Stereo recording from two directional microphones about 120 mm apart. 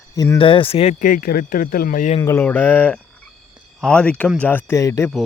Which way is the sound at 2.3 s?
15° left (ahead or behind).